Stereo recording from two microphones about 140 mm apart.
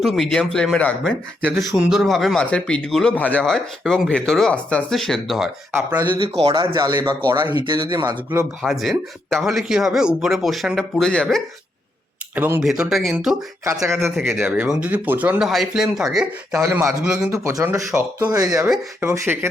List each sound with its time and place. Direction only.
0.0 s speech: centre (ahead or behind)
6.0 s speech: 40° right (ahead or behind)
6.7 s speech: 25° right (ahead or behind)
7.5 s speech: 35° right (ahead or behind)
8.6 s speech: centre (ahead or behind)
12.3 s speech: 15° right (ahead or behind)
12.6 s speech: 5° right (ahead or behind)
13.7 s speech: 20° right (ahead or behind)
14.2 s speech: centre (ahead or behind)
16.6 s speech: 15° right (ahead or behind)
17.0 s speech: 5° right (ahead or behind)
17.3 s speech: 20° right (ahead or behind)